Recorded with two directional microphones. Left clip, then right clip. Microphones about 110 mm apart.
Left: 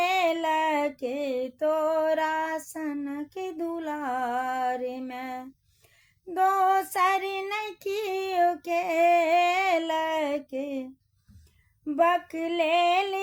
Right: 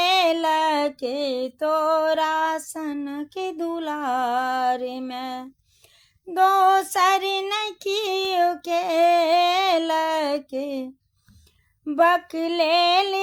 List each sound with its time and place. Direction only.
0.0 s female singing: 35° right (ahead or behind)
6.3 s child singing: 30° right (ahead or behind)
11.9 s female singing: 35° right (ahead or behind)